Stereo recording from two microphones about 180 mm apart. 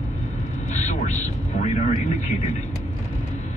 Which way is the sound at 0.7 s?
40° left (ahead or behind).